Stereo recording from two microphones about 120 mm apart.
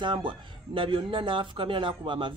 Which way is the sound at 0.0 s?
40° right (ahead or behind).